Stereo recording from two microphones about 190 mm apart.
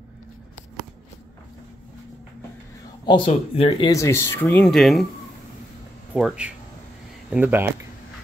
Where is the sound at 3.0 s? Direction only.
30° left (ahead or behind).